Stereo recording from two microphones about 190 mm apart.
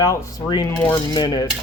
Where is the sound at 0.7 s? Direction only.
10° left (ahead or behind).